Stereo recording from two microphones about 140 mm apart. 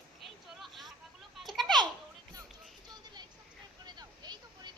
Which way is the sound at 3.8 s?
30° right (ahead or behind).